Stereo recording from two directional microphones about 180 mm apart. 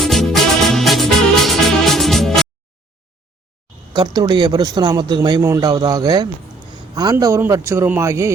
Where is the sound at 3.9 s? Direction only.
20° right (ahead or behind).